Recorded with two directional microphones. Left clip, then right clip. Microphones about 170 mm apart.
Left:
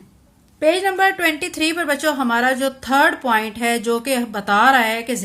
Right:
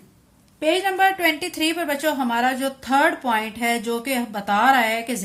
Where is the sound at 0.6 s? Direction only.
20° left (ahead or behind).